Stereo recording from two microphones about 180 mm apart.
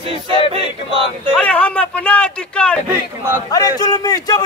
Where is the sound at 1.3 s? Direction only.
5° left (ahead or behind).